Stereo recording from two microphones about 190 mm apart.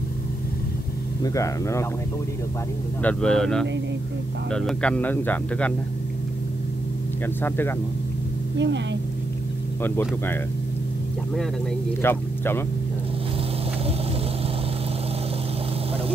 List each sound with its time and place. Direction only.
1.2 s speech: 15° left (ahead or behind)
3.0 s speech: 5° left (ahead or behind)
7.4 s speech: 10° left (ahead or behind)
8.5 s speech: 70° right (ahead or behind)
9.8 s speech: 10° left (ahead or behind)
12.0 s speech: 10° left (ahead or behind)